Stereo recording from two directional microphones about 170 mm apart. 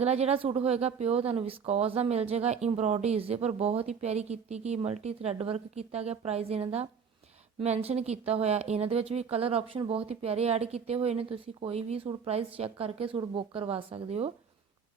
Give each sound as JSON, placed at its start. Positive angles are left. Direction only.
{"t": 0.0, "sound": "speech", "side_deg": -40}